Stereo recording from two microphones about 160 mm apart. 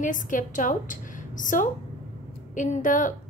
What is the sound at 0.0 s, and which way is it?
A woman's voice, 55° left (ahead or behind).